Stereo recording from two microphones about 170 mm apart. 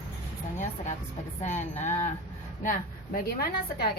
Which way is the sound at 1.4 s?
45° left (ahead or behind).